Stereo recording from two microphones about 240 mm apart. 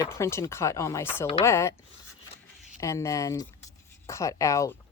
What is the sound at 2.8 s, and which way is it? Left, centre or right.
Speech, centre.